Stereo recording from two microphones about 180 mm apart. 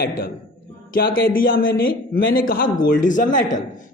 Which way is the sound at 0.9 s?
55° left (ahead or behind).